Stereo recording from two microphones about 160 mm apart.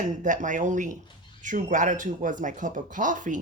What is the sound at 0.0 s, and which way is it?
Speech, 50° right (ahead or behind).